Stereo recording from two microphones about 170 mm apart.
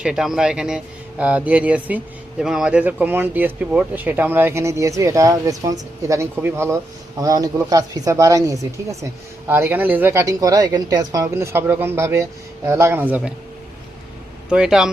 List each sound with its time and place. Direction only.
0.0 s speech: 5° right (ahead or behind)
14.5 s speech: 5° right (ahead or behind)